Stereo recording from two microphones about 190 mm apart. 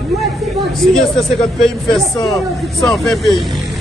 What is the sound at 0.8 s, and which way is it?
Speech, centre (ahead or behind).